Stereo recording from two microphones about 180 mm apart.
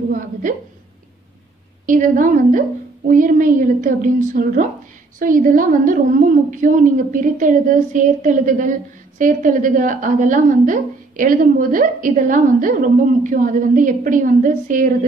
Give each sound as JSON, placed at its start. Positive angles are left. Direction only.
{"t": 0.1, "sound": "a woman's voice", "side_deg": -50}
{"t": 1.9, "sound": "a woman's voice", "side_deg": -45}